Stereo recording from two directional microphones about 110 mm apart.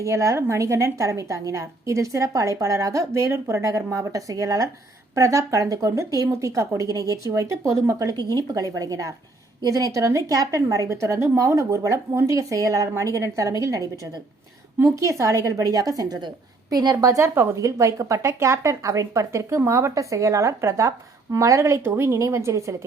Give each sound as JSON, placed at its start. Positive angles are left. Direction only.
{"t": 0.0, "sound": "a woman's voice", "side_deg": -25}